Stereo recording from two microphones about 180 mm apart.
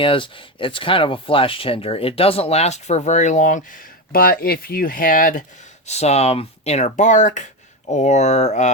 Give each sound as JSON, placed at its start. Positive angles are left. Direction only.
{"t": 0.0, "sound": "speech", "side_deg": 30}
{"t": 5.8, "sound": "speech", "side_deg": 35}